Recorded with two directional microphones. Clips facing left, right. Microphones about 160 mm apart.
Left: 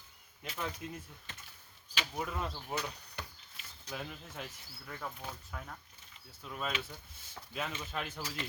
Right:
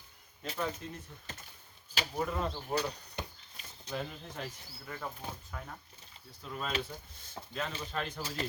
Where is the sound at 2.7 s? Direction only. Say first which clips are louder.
Right 6 dB; centre (ahead or behind).